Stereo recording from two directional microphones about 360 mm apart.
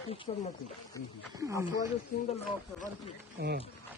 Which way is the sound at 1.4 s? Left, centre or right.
Centre.